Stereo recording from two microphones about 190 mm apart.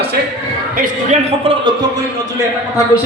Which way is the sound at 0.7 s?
35° right (ahead or behind).